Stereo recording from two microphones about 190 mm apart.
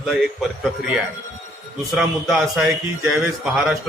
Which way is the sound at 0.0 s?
Centre (ahead or behind).